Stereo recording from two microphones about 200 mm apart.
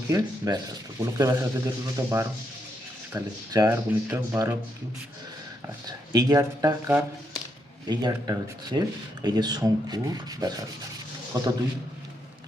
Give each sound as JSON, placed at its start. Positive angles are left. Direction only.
{"t": 0.1, "sound": "a man's voice", "side_deg": -15}
{"t": 6.1, "sound": "a man's voice", "side_deg": -15}
{"t": 7.9, "sound": "rub", "side_deg": -20}